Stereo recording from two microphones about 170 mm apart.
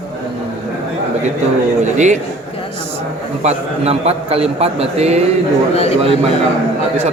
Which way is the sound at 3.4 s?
40° right (ahead or behind).